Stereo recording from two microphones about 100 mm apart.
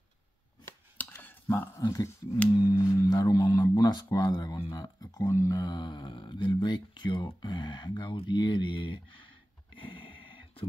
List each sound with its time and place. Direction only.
0.9 s chopping: 20° left (ahead or behind)
1.8 s speech: 35° left (ahead or behind); by 9.0 s 55° left (ahead or behind)
9.8 s a sound: 60° left (ahead or behind)